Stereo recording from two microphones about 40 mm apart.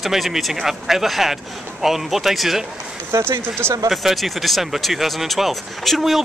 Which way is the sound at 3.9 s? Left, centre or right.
Centre.